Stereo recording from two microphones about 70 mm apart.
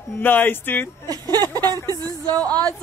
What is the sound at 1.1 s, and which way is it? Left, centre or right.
Speech, right.